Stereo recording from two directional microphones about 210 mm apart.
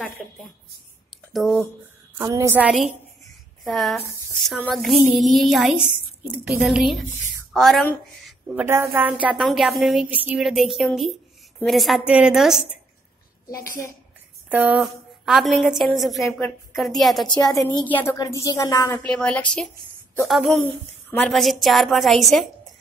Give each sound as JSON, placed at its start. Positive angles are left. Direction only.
{"t": 0.2, "sound": "a woman's voice", "side_deg": 0}
{"t": 2.1, "sound": "a woman's voice", "side_deg": -15}
{"t": 8.6, "sound": "a woman's voice", "side_deg": -10}
{"t": 14.5, "sound": "a woman's voice", "side_deg": -5}
{"t": 17.5, "sound": "a woman's voice", "side_deg": 15}
{"t": 21.1, "sound": "a woman's voice", "side_deg": 5}